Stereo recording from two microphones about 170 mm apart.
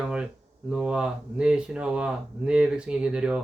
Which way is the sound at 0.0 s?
5° right (ahead or behind).